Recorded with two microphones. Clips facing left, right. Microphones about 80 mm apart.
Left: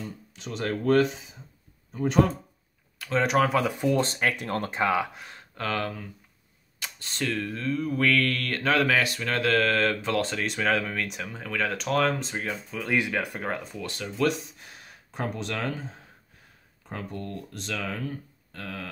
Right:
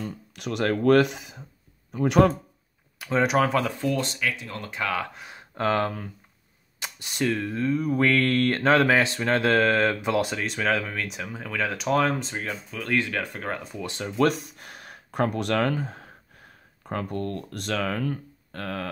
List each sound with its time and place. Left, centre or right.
0.0 s speech: right
3.0 s speech: centre
3.7 s speech: centre
4.0 s speech: left
4.7 s speech: left
5.1 s speech: centre
5.5 s speech: right
6.8 s speech: centre
10.4 s speech: centre
13.7 s speech: right
14.1 s speech: right